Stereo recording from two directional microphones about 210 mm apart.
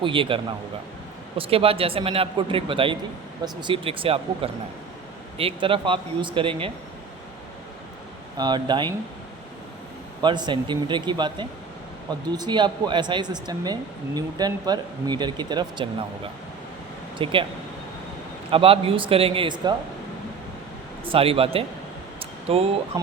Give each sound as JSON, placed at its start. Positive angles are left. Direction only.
{"t": 0.0, "sound": "speech", "side_deg": -25}
{"t": 8.4, "sound": "speech", "side_deg": -20}
{"t": 10.2, "sound": "speech", "side_deg": -20}
{"t": 18.5, "sound": "speech", "side_deg": -25}
{"t": 21.0, "sound": "speech", "side_deg": -25}
{"t": 22.2, "sound": "a sound", "side_deg": -30}